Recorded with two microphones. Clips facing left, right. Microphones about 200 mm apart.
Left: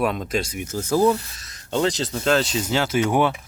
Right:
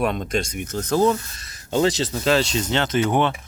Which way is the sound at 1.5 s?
5° right (ahead or behind).